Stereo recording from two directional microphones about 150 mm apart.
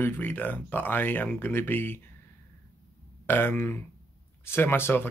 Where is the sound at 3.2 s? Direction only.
15° left (ahead or behind).